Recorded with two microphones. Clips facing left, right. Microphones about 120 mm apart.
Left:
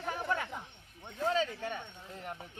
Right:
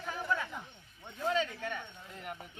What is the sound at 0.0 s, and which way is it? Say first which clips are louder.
Chatter: left 1 dB; 55° left (ahead or behind).